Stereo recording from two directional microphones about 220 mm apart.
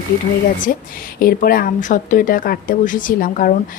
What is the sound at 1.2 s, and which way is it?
A woman's voice, 40° left (ahead or behind).